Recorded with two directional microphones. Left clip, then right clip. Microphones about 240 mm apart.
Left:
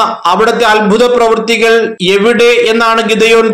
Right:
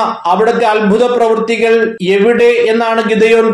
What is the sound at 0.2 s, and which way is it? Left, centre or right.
A man's voice, left.